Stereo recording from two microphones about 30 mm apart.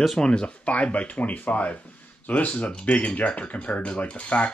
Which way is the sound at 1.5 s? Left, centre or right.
Left.